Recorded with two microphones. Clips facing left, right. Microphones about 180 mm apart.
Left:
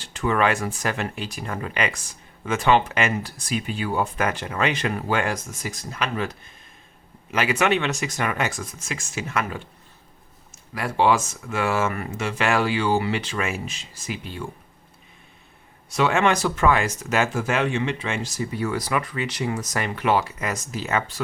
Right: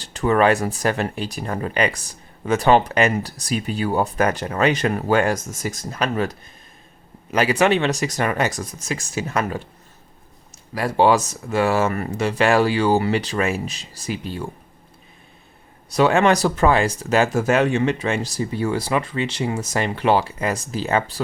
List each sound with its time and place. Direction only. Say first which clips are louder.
0.0 s speech: right 5 dB; 35° right (ahead or behind)
10.8 s speech: right 4 dB; 35° right (ahead or behind)
15.9 s speech: right 4 dB; 35° right (ahead or behind)